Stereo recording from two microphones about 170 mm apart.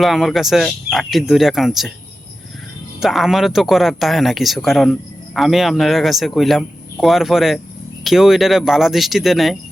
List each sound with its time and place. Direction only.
0.0 s speech: centre (ahead or behind)
3.0 s speech: centre (ahead or behind)